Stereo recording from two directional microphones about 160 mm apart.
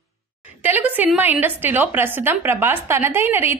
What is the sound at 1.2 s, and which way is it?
A woman's voice, 10° right (ahead or behind).